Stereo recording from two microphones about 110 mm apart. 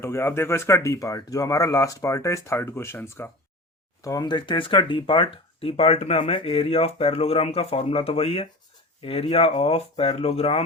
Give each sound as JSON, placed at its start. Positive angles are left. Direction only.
{"t": 0.0, "sound": "speech", "side_deg": 25}
{"t": 4.0, "sound": "speech", "side_deg": 35}